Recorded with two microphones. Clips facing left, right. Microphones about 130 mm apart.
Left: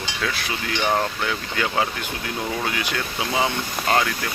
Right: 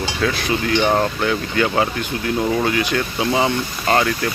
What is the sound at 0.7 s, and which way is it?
Speech, 25° right (ahead or behind).